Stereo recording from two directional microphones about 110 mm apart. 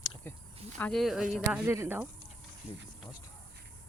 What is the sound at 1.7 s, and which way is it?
Speech, 20° right (ahead or behind).